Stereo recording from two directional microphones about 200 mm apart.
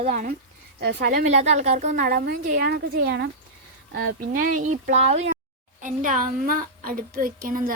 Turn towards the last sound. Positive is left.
turn(degrees=-45)  # may be behind; listen again after turning